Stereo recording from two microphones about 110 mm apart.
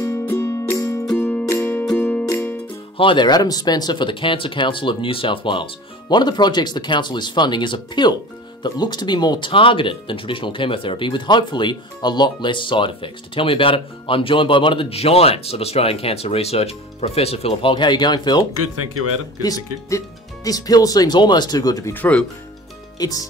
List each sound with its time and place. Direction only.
0.0 s music: 25° left (ahead or behind)
3.0 s speech: 45° left (ahead or behind)
19.4 s speech: 35° left (ahead or behind)
21.9 s speech: 15° left (ahead or behind)
22.9 s speech: 35° left (ahead or behind)